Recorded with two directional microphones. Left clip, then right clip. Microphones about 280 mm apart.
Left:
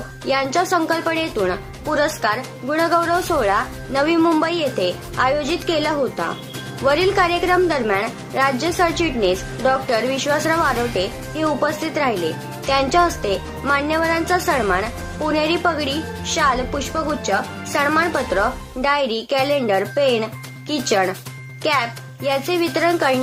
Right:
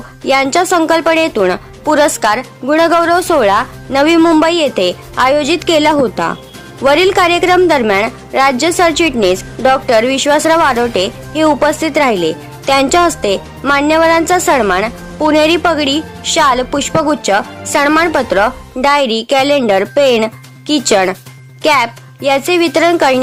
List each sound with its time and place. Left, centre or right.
0.3 s a woman's voice: right